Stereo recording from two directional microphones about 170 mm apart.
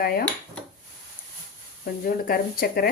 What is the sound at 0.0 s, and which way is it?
Speech, 65° left (ahead or behind).